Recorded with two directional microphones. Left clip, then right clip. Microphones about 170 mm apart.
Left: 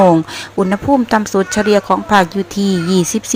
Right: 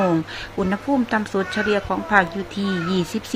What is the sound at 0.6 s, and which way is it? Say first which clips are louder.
Speech: left 8 dB; 30° left (ahead or behind).